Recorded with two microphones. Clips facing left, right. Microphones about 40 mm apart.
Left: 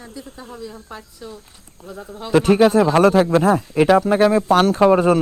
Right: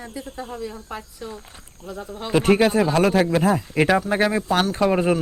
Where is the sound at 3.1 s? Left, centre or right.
Centre.